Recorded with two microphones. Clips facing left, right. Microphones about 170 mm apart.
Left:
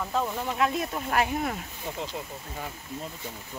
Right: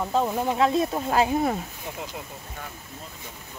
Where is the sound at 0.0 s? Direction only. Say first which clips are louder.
Right 5 dB; 25° right (ahead or behind).